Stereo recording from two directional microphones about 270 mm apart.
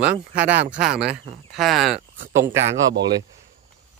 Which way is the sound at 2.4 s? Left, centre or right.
Right.